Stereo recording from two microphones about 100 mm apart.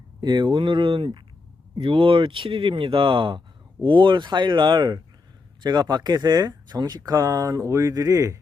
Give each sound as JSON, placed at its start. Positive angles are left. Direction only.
{"t": 0.2, "sound": "speech", "side_deg": -50}